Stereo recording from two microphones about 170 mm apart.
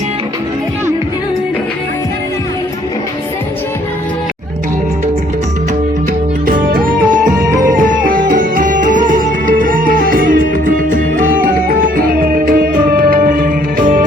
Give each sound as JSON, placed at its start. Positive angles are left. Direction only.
{"t": 6.4, "sound": "music", "side_deg": -55}
{"t": 7.3, "sound": "music", "side_deg": -20}
{"t": 7.8, "sound": "music", "side_deg": -55}